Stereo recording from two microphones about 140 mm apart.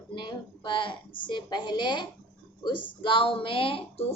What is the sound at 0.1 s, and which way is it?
A woman's voice, 35° left (ahead or behind).